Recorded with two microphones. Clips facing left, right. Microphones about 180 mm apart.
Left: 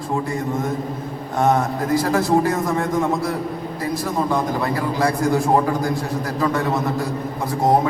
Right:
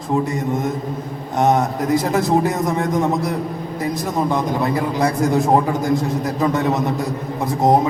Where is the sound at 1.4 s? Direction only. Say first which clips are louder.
Right 2 dB; 20° right (ahead or behind).